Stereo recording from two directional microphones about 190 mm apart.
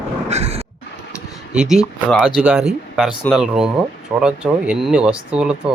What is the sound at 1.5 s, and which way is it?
Speech, 5° right (ahead or behind).